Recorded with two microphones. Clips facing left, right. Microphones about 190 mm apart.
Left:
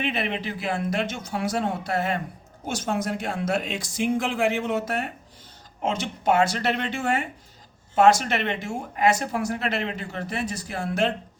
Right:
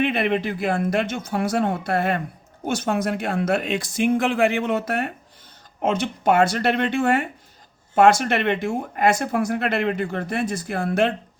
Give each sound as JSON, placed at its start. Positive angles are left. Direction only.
{"t": 0.0, "sound": "speech", "side_deg": -55}